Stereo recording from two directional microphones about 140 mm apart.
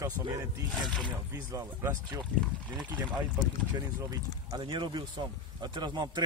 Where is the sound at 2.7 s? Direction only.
5° right (ahead or behind).